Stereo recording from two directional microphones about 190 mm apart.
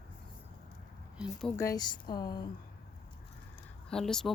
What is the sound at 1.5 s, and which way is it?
Speech, 15° left (ahead or behind).